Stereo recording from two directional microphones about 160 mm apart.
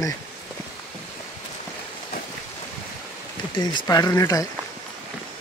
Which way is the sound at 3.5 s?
25° left (ahead or behind).